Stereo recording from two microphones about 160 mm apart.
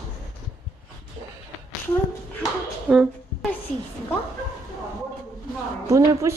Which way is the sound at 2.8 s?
10° right (ahead or behind).